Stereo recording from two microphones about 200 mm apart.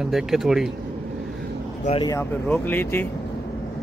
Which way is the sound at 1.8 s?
30° left (ahead or behind).